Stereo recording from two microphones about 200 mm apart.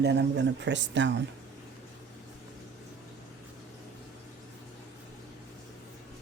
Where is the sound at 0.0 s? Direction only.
55° right (ahead or behind).